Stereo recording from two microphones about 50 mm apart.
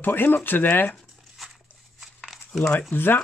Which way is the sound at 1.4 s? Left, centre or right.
Centre.